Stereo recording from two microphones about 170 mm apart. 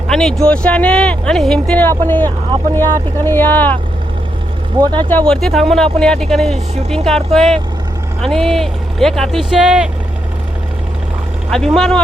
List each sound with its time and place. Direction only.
0.1 s speech: 5° left (ahead or behind)
4.8 s speech: 25° right (ahead or behind)
5.0 s speech: 10° left (ahead or behind)
11.5 s speech: centre (ahead or behind)